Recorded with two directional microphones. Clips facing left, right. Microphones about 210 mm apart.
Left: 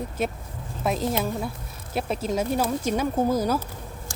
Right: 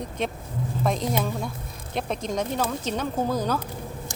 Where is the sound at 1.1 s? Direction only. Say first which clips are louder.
Even; 5° left (ahead or behind).